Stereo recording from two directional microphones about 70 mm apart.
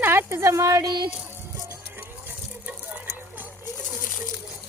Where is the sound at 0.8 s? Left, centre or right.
Right.